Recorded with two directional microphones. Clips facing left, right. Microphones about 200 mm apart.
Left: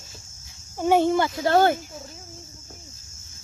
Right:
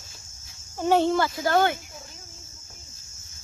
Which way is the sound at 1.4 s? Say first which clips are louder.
Left 4 dB; 35° left (ahead or behind).